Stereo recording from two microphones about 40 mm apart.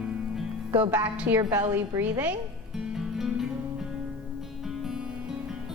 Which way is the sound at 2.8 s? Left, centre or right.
Centre.